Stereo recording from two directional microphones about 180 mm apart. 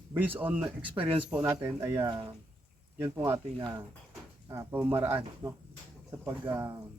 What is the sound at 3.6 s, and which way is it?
A man's voice, 20° right (ahead or behind).